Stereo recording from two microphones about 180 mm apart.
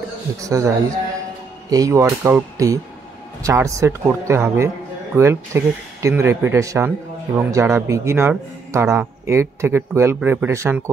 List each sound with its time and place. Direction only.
0.4 s a man's voice: 20° right (ahead or behind)